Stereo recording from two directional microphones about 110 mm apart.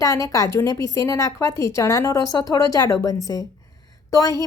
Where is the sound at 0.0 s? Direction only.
30° left (ahead or behind).